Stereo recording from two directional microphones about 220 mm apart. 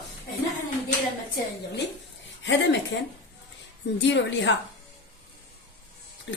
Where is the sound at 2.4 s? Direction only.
55° left (ahead or behind).